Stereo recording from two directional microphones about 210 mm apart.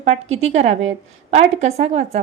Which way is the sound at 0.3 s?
30° right (ahead or behind).